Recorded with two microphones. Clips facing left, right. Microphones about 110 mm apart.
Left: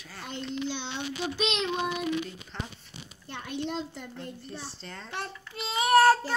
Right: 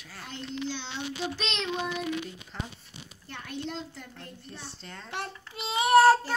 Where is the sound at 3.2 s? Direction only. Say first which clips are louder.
Left 3 dB; 20° left (ahead or behind).